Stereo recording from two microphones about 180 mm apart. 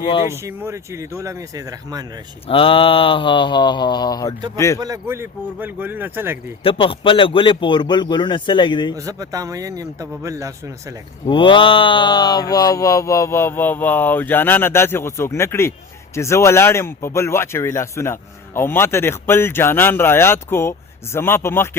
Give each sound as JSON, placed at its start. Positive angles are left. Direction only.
{"t": 0.3, "sound": "speech", "side_deg": -15}
{"t": 2.5, "sound": "a man's voice", "side_deg": 30}
{"t": 4.8, "sound": "speech", "side_deg": -15}
{"t": 6.6, "sound": "a man's voice", "side_deg": 30}
{"t": 9.0, "sound": "speech", "side_deg": -20}
{"t": 11.3, "sound": "speech", "side_deg": 25}